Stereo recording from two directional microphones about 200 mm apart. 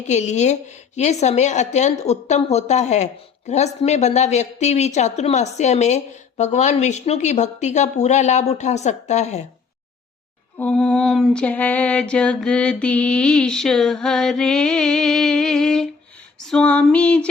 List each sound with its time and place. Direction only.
0.1 s a woman's voice: 35° left (ahead or behind)
10.6 s mantra: 5° left (ahead or behind)